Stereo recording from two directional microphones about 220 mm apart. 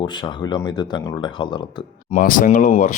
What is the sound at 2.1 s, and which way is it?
Speech, 40° left (ahead or behind).